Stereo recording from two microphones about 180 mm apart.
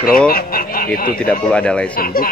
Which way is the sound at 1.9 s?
55° left (ahead or behind).